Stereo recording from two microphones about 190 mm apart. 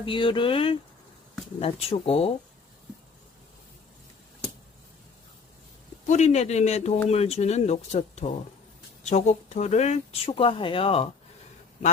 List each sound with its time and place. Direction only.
0.0 s speech: 25° left (ahead or behind)
6.1 s speech: 35° left (ahead or behind)